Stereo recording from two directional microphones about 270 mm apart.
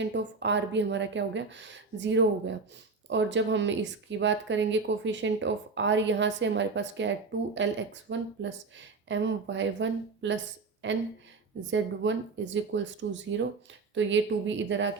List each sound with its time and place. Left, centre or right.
0.0 s a woman's voice: right